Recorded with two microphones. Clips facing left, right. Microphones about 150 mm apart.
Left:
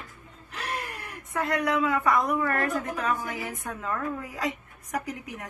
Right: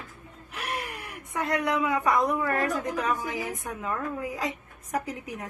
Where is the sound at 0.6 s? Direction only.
10° right (ahead or behind); by 5.2 s 25° right (ahead or behind).